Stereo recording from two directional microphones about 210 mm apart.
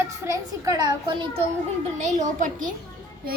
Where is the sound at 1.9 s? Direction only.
35° right (ahead or behind).